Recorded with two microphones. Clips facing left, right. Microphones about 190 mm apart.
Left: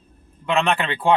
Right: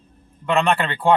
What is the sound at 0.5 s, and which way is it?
Speech, centre (ahead or behind).